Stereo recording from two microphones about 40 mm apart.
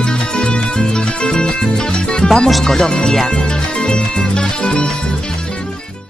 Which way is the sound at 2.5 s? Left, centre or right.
Centre.